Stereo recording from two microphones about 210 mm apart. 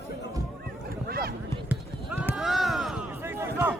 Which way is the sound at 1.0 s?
45° right (ahead or behind).